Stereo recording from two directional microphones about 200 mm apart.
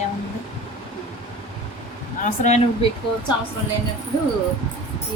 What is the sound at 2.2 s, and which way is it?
Speech, 35° left (ahead or behind).